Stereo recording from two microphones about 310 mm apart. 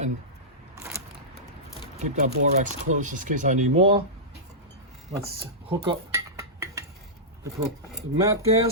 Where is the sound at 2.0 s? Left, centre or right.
Right.